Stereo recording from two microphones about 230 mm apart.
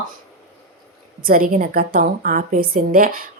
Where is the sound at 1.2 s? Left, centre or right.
Right.